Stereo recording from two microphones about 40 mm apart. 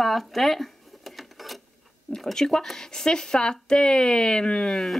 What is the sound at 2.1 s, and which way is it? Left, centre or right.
A woman's voice, centre.